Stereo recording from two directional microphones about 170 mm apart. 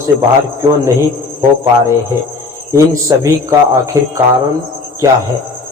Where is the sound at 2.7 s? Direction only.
20° right (ahead or behind).